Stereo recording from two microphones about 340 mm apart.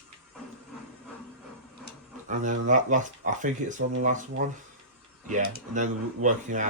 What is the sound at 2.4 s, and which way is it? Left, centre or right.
Speech, right.